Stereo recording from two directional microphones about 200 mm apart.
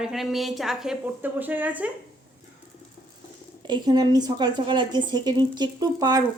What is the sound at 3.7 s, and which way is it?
A woman's voice, 20° right (ahead or behind).